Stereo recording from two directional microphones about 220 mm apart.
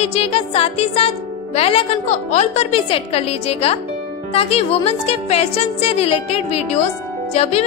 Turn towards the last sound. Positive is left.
turn(degrees=30)  # may be behind; listen again after turning